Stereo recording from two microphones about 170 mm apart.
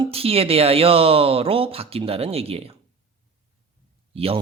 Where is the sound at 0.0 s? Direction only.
35° right (ahead or behind).